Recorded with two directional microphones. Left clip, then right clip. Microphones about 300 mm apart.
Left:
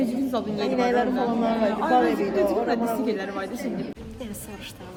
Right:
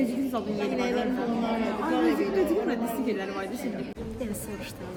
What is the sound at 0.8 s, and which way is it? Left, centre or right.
A woman's voice, centre.